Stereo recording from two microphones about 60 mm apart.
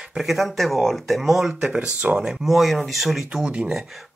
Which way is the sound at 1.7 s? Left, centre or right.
Right.